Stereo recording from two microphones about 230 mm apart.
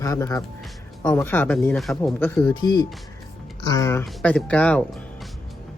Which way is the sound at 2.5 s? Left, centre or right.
Centre.